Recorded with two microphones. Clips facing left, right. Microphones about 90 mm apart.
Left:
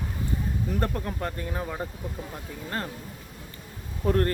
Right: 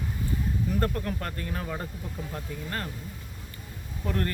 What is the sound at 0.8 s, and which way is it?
Speech, 20° left (ahead or behind).